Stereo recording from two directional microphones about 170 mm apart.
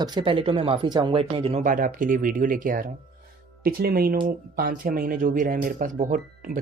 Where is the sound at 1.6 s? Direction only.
50° right (ahead or behind).